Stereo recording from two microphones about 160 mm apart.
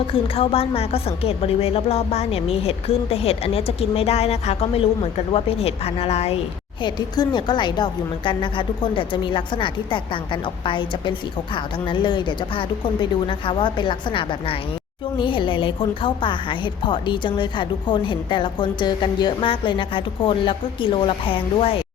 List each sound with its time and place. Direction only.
0.1 s a woman's voice: 35° left (ahead or behind)
6.8 s a woman's voice: 30° left (ahead or behind)